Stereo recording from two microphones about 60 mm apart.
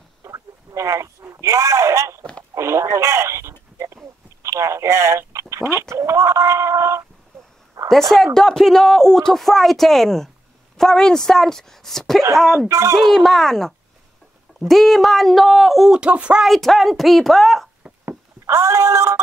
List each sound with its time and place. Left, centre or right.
0.2 s a sound: right
2.5 s speech: right
3.8 s telephone: right
7.9 s speech: centre
12.6 s speech: right
12.9 s speech: centre
15.9 s speech: centre
16.4 s speech: centre
18.4 s a sound: right